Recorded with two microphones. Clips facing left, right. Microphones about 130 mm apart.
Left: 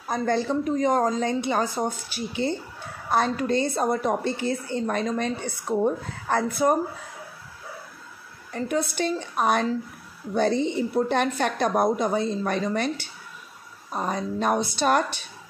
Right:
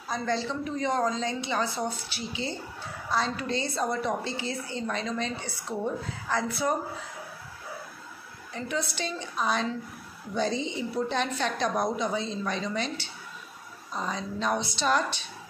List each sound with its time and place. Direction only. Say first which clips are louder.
0.1 s a woman's voice: left 6 dB; 50° left (ahead or behind)
8.5 s a woman's voice: left 6 dB; 50° left (ahead or behind)